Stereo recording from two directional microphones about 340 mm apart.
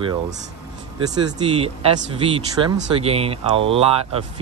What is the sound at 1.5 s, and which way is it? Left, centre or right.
Speech, centre.